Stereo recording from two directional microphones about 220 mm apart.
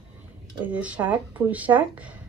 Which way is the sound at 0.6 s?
5° right (ahead or behind).